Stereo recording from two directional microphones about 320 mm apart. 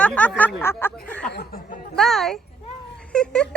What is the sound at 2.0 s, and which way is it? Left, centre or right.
A woman's voice, centre.